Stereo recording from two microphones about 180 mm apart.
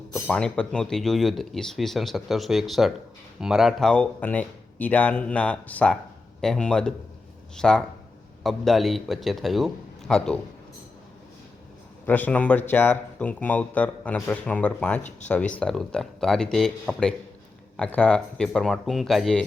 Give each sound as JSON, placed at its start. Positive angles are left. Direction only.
{"t": 0.1, "sound": "speech", "side_deg": 5}
{"t": 12.0, "sound": "speech", "side_deg": 10}